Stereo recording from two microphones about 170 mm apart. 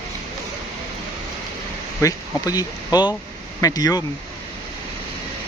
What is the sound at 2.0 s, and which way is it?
Speech, 20° left (ahead or behind).